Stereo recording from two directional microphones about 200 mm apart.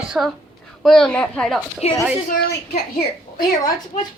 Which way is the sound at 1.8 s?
30° left (ahead or behind).